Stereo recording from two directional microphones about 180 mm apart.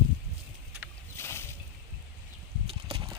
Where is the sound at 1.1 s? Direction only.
15° left (ahead or behind).